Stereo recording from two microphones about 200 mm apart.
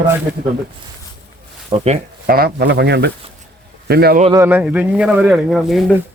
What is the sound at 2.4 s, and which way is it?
Speech, 55° right (ahead or behind).